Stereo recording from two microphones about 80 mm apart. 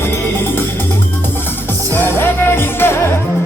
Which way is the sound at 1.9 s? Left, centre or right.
Left.